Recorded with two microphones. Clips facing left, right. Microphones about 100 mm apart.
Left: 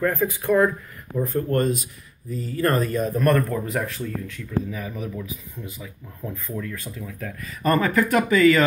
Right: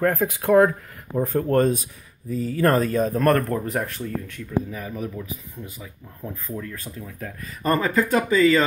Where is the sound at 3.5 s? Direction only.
45° right (ahead or behind).